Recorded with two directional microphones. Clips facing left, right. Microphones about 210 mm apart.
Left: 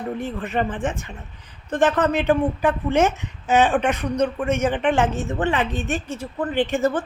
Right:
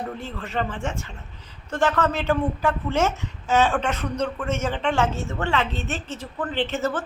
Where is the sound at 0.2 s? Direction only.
15° left (ahead or behind).